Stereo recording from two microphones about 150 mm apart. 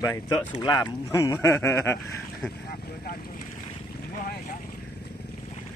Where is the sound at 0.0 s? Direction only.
25° left (ahead or behind).